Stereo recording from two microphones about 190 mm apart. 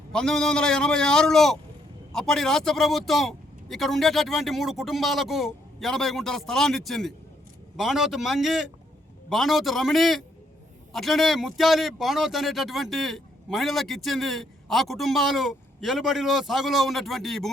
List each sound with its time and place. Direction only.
0.1 s a man's voice: 5° left (ahead or behind)